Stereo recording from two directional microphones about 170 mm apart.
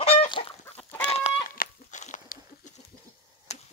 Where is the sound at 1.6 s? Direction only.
45° left (ahead or behind).